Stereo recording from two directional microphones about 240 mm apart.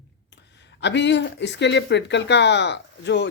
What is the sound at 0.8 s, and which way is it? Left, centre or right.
Speech, left.